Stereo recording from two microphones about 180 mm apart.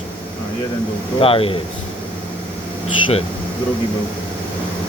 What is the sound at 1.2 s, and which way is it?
Speech, 30° left (ahead or behind).